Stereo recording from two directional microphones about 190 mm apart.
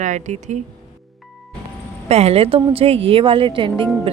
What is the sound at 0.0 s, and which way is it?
Speech, 40° right (ahead or behind).